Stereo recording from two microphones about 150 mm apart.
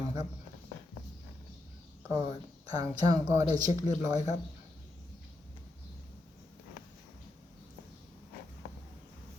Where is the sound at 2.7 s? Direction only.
25° right (ahead or behind).